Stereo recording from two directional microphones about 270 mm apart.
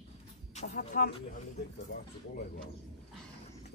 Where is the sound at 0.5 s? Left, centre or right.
Left.